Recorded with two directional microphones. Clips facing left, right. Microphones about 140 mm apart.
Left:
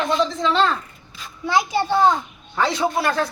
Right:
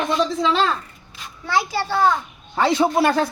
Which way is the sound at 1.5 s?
20° left (ahead or behind).